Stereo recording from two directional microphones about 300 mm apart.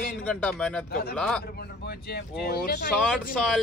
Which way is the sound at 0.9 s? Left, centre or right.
Left.